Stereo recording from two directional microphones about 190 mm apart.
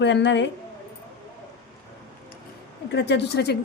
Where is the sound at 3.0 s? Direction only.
65° left (ahead or behind).